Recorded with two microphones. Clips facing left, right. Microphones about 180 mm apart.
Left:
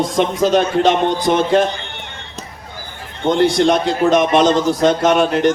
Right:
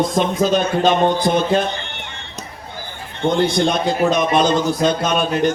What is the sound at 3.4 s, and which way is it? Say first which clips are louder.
A man's voice: left 5 dB; 85° left.